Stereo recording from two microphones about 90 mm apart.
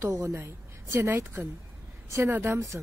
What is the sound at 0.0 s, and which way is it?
A woman's voice, 30° right (ahead or behind).